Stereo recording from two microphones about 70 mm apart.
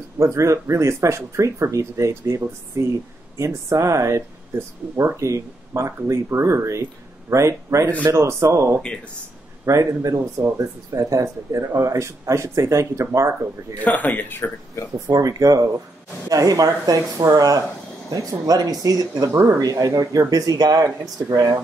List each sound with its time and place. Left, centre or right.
0.2 s speech: right
13.8 s speech: left
15.0 s speech: right